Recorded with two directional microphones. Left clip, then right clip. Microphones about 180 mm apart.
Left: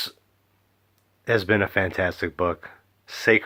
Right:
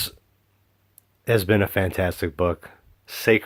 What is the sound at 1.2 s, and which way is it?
Speech, 30° right (ahead or behind).